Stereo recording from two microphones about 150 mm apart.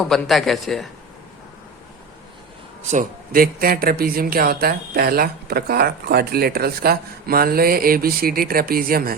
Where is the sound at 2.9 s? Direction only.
65° right (ahead or behind).